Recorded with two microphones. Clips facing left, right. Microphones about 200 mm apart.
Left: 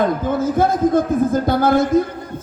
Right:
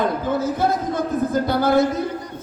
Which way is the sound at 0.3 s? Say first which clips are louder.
Left 5 dB; 50° left (ahead or behind).